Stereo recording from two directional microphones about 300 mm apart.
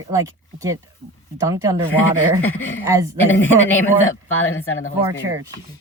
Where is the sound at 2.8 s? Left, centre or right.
Centre.